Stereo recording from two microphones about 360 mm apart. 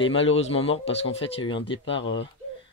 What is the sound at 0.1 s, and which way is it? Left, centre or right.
Speech, left.